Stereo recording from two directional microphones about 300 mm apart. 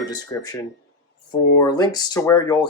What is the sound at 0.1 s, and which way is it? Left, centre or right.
Speech, centre.